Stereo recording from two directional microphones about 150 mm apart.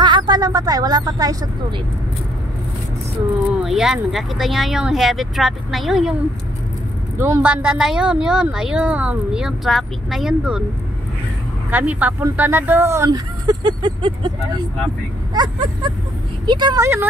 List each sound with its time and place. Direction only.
0.0 s speech: 30° right (ahead or behind)
3.6 s speech: 5° right (ahead or behind)
7.2 s speech: 15° right (ahead or behind)
11.7 s speech: 10° right (ahead or behind); by 14.3 s 30° right (ahead or behind)
15.3 s speech: 30° right (ahead or behind)